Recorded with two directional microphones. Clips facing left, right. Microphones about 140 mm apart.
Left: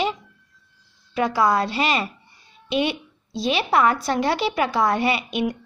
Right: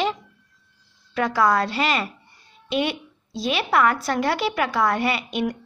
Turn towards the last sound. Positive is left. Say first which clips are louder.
# left 1 dB
turn(degrees=20)  # may be behind; listen again after turning